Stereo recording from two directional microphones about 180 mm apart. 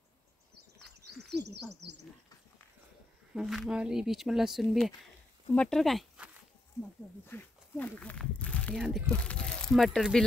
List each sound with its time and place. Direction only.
1.3 s a sound: 70° right (ahead or behind)
3.3 s speech: centre (ahead or behind)
7.2 s speech: 10° left (ahead or behind)